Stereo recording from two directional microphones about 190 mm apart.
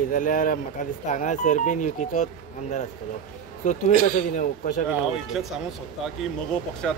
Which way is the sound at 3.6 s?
40° left (ahead or behind).